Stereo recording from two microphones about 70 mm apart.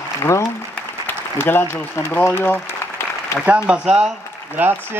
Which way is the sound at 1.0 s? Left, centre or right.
Left.